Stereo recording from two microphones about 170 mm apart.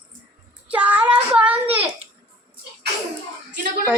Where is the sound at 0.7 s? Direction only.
10° right (ahead or behind).